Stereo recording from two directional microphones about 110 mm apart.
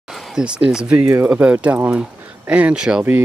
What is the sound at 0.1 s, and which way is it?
Speech, 5° right (ahead or behind).